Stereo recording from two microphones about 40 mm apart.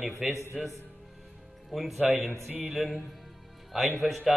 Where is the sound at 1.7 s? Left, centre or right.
Centre.